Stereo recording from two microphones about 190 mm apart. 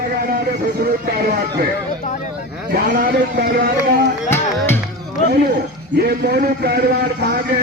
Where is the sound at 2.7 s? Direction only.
50° right (ahead or behind).